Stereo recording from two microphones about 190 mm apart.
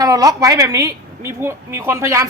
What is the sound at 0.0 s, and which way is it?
A woman's voice, 20° right (ahead or behind).